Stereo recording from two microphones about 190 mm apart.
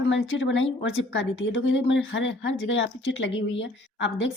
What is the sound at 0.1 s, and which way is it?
A woman's voice, 75° left (ahead or behind).